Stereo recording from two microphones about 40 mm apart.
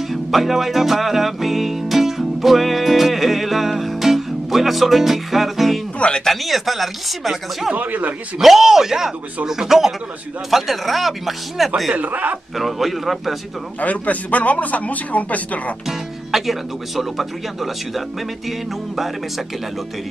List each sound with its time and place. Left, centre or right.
0.1 s music: centre
5.9 s speech: left
6.2 s speech: centre
7.7 s a man's voice: right
8.4 s a man's voice: centre
11.9 s a man's voice: right
12.5 s speech: centre
13.7 s a man's voice: left
15.9 s speech: centre